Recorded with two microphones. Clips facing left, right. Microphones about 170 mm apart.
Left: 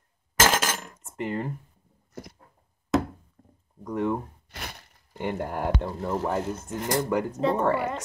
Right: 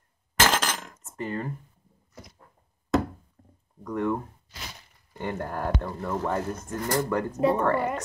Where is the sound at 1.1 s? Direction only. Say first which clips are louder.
Left 2 dB; 15° left (ahead or behind).